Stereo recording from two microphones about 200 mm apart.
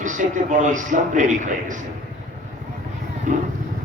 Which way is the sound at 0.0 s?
40° right (ahead or behind).